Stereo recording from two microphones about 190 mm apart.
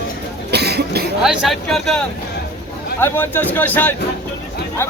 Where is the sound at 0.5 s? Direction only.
60° right (ahead or behind).